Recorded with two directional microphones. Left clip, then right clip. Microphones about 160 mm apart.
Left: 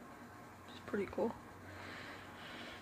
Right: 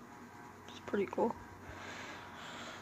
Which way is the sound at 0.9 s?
10° right (ahead or behind).